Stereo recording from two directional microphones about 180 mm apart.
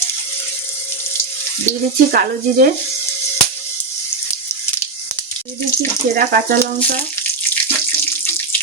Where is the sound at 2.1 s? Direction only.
55° right (ahead or behind).